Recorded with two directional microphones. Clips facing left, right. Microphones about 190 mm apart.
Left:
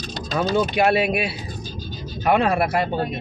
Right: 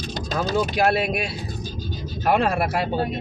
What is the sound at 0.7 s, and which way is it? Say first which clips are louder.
Speech: left 2 dB; 5° left (ahead or behind).